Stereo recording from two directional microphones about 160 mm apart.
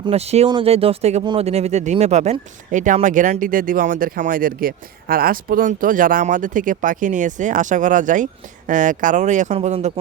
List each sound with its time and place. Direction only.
0.0 s speech: 40° right (ahead or behind)